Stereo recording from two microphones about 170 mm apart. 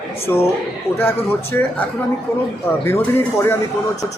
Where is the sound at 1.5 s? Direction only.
10° left (ahead or behind).